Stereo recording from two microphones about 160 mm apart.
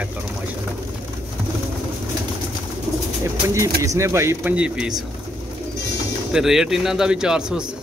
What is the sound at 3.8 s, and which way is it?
A man's voice, 20° right (ahead or behind).